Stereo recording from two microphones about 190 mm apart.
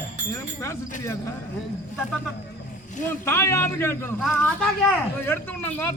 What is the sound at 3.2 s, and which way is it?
Speech, 15° left (ahead or behind).